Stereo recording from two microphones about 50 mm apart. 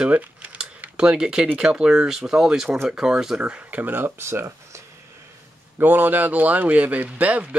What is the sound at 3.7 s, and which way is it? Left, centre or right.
Speech, right.